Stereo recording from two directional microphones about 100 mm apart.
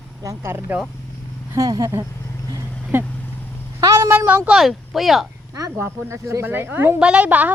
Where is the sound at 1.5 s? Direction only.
35° right (ahead or behind).